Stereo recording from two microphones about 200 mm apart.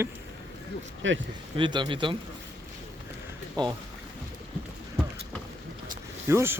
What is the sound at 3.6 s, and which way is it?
Speech, 20° right (ahead or behind).